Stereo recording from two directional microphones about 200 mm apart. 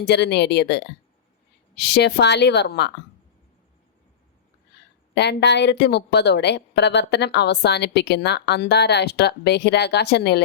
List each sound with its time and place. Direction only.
0.0 s a woman's voice: 55° left (ahead or behind)
5.1 s a woman's voice: 55° left (ahead or behind)